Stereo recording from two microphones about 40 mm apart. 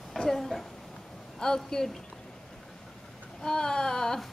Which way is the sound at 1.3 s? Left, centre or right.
Centre.